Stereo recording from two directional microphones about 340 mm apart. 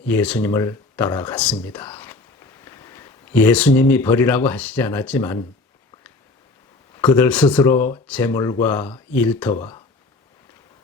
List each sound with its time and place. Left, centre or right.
0.1 s speech: centre
6.9 s speech: centre